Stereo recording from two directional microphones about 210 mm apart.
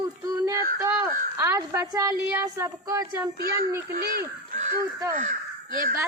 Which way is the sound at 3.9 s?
45° right (ahead or behind).